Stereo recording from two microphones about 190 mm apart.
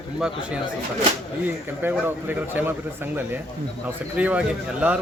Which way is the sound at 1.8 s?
10° right (ahead or behind).